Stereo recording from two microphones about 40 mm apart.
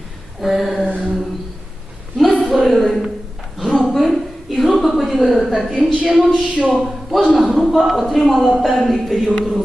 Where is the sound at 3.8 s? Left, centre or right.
Centre.